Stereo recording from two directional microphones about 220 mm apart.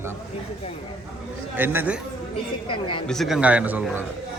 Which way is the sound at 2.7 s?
25° left (ahead or behind).